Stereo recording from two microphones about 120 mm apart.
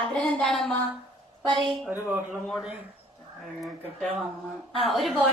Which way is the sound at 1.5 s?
40° right (ahead or behind).